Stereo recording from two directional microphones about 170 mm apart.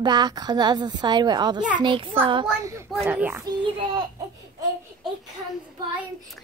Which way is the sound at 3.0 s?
10° right (ahead or behind).